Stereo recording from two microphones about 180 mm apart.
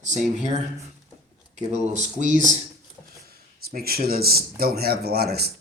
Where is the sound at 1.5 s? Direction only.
40° right (ahead or behind).